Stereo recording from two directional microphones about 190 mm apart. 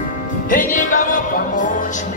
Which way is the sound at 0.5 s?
45° left (ahead or behind).